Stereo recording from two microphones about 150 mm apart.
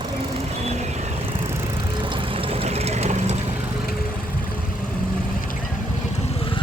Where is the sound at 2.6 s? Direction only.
45° right (ahead or behind).